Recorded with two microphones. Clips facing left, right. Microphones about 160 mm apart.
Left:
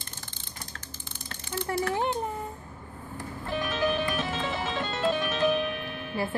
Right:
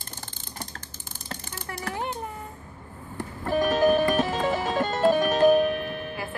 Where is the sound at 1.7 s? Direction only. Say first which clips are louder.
Left 8 dB; 30° left (ahead or behind).